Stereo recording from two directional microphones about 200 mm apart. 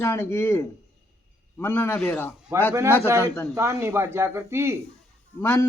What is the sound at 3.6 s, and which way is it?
Speech, 15° right (ahead or behind).